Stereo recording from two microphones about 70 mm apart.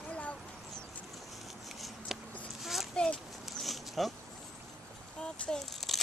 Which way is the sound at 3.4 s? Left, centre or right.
Centre.